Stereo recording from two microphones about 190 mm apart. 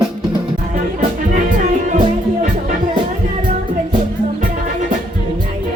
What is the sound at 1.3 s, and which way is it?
Music, 45° right (ahead or behind).